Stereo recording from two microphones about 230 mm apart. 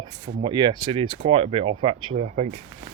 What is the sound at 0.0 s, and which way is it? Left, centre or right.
Speech, centre.